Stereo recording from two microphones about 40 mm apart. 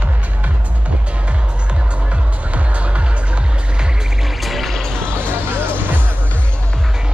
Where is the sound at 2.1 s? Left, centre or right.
Right.